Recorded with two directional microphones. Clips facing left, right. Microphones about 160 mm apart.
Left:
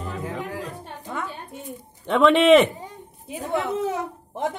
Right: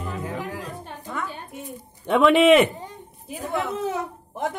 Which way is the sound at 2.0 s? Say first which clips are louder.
Even; 10° right (ahead or behind).